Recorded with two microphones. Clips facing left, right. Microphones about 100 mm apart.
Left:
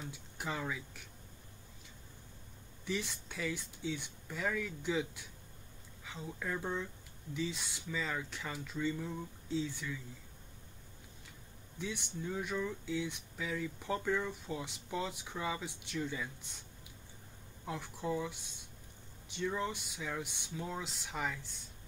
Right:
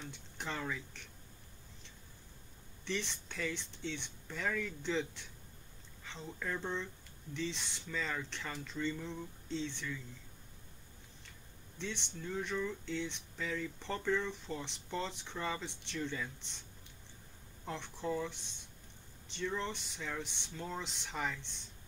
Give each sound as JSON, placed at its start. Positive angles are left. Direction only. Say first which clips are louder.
{"t": 0.0, "sound": "speech", "louder": "left 2 dB", "side_deg": 5}
{"t": 2.8, "sound": "speech", "louder": "left 1 dB", "side_deg": 5}
{"t": 11.8, "sound": "speech", "louder": "left 2 dB", "side_deg": 10}
{"t": 17.6, "sound": "speech", "louder": "left 1 dB", "side_deg": 5}